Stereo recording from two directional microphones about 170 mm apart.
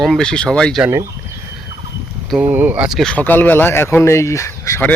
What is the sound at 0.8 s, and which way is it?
Speech, 15° right (ahead or behind).